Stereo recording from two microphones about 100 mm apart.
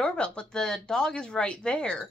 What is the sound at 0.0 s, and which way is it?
Speech, 10° left (ahead or behind).